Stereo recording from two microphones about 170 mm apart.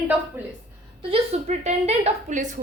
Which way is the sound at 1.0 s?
40° right (ahead or behind).